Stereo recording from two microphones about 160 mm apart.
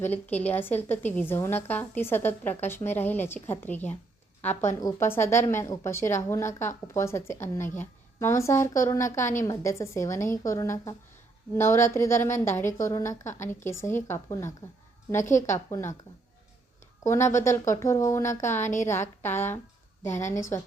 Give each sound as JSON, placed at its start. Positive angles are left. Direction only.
{"t": 0.0, "sound": "speech", "side_deg": 10}
{"t": 17.0, "sound": "speech", "side_deg": 20}